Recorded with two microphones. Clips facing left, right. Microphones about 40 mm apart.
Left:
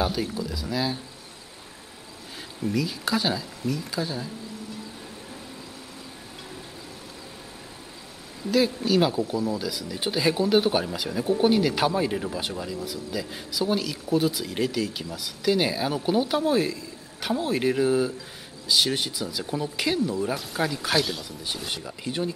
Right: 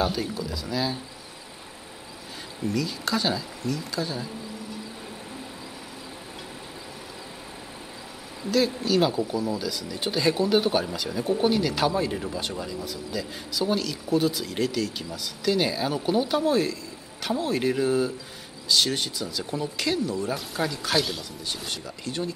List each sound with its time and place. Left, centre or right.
0.0 s speech: centre
2.6 s speech: centre
8.5 s speech: centre